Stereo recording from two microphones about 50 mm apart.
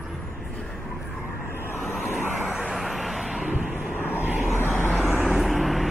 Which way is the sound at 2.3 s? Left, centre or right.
Right.